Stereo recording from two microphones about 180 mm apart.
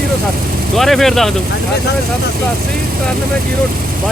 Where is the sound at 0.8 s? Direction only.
Centre (ahead or behind).